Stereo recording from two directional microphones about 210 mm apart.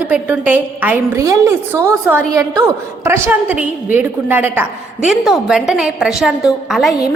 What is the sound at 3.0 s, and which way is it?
A woman's voice, 10° right (ahead or behind).